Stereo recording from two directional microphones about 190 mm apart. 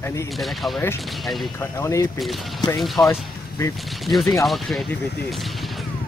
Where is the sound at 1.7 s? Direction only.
15° left (ahead or behind).